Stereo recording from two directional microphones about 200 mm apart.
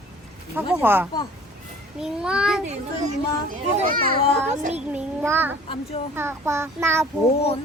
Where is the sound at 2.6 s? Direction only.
35° right (ahead or behind).